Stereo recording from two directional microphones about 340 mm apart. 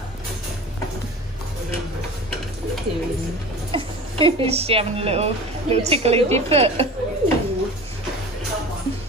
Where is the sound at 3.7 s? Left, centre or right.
Centre.